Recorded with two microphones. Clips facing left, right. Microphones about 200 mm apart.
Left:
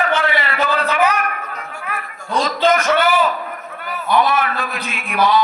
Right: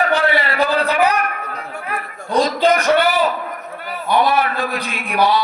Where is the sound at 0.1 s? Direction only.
35° right (ahead or behind).